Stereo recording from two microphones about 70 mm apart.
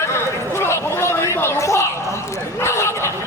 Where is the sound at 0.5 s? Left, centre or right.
Left.